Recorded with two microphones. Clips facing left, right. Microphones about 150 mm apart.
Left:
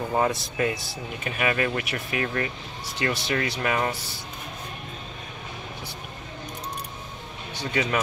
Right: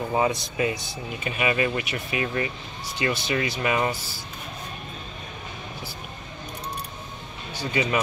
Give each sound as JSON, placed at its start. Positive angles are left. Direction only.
{"t": 0.1, "sound": "speech", "side_deg": 0}
{"t": 7.5, "sound": "speech", "side_deg": -10}